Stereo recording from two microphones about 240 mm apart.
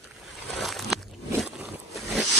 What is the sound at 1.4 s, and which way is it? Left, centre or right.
Zipper, centre.